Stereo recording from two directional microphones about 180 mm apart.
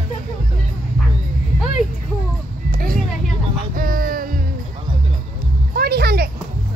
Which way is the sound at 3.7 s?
50° right (ahead or behind).